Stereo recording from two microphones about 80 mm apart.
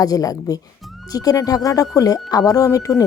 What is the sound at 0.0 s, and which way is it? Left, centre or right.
A woman's voice, left.